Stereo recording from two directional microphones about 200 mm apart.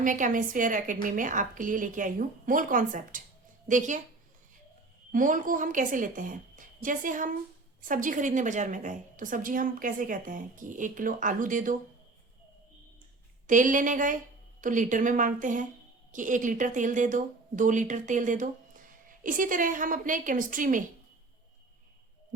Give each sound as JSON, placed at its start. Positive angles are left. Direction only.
{"t": 0.0, "sound": "speech", "side_deg": -40}
{"t": 5.1, "sound": "speech", "side_deg": -40}
{"t": 13.5, "sound": "speech", "side_deg": -40}